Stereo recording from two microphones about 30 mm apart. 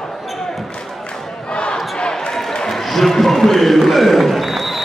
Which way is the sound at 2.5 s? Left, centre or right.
Centre.